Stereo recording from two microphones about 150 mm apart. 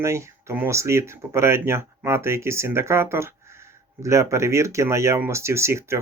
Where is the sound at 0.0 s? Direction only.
20° right (ahead or behind).